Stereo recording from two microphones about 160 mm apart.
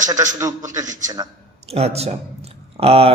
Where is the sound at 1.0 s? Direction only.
25° right (ahead or behind).